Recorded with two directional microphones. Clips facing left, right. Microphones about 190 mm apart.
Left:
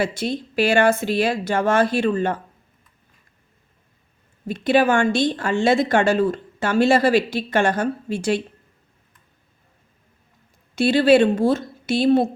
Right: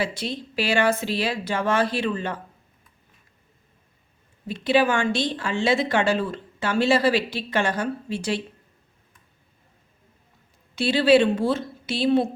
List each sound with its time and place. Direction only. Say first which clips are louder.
0.0 s speech: left 4 dB; 50° left (ahead or behind)
4.4 s speech: left 3 dB; 50° left (ahead or behind)
10.8 s speech: left 3 dB; 50° left (ahead or behind)